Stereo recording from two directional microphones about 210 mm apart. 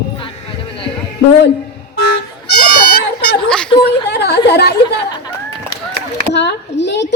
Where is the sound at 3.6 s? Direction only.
20° left (ahead or behind).